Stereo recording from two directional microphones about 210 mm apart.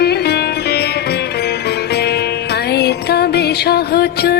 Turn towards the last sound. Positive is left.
turn(degrees=50)  # may be behind; listen again after turning